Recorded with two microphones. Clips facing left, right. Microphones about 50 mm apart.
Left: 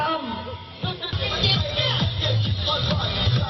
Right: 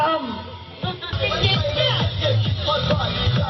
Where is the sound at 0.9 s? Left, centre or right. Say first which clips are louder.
Right 4 dB; centre.